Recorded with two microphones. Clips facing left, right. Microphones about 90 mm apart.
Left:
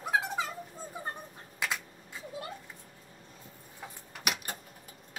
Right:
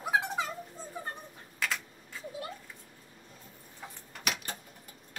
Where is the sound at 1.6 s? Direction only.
15° left (ahead or behind).